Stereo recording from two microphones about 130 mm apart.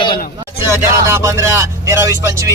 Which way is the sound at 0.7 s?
20° right (ahead or behind).